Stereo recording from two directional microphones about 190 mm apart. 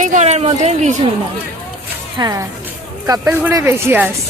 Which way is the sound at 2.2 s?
15° right (ahead or behind).